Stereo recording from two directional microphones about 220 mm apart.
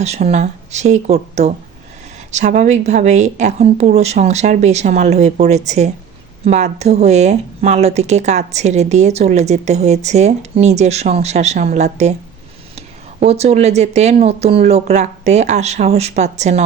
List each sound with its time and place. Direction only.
0.0 s a woman's voice: 30° right (ahead or behind)